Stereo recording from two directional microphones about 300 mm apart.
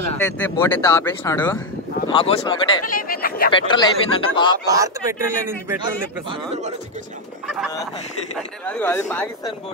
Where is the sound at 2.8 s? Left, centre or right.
Left.